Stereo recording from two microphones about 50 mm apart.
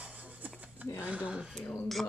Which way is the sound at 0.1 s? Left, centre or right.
Right.